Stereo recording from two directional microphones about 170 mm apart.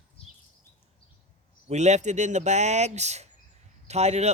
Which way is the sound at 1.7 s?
40° right (ahead or behind).